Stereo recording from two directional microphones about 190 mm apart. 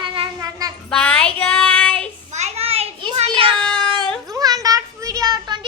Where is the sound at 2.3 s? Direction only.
35° right (ahead or behind).